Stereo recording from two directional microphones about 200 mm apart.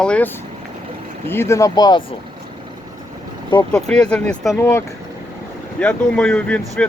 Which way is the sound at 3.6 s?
5° left (ahead or behind).